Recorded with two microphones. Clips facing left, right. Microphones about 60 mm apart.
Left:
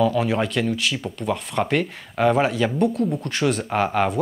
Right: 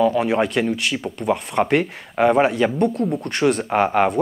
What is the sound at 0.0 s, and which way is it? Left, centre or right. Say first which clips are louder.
Speech: right 3 dB; centre.